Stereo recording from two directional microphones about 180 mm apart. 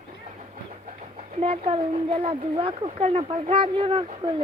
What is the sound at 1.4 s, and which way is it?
Speech, 30° right (ahead or behind).